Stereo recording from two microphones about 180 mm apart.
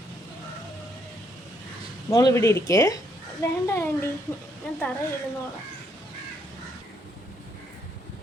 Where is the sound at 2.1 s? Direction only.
20° left (ahead or behind).